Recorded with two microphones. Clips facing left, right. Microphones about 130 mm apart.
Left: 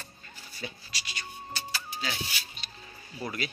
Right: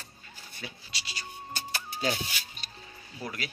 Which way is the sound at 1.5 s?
50° right (ahead or behind).